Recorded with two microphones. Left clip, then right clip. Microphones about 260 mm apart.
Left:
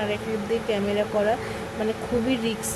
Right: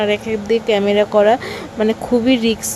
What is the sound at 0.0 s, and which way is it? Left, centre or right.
Speech, right.